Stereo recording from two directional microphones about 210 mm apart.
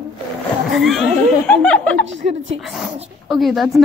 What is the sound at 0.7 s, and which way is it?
Speech, centre (ahead or behind).